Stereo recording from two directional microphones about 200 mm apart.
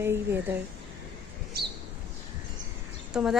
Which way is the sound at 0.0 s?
10° right (ahead or behind).